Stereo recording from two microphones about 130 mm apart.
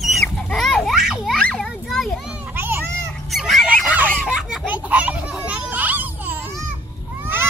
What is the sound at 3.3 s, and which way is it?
Honk, centre (ahead or behind).